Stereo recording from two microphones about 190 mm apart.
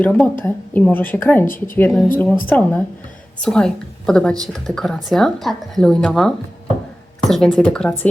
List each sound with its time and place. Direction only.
0.0 s speech: 5° left (ahead or behind)
1.5 s speech: 45° left (ahead or behind)
1.7 s speech: 5° left (ahead or behind)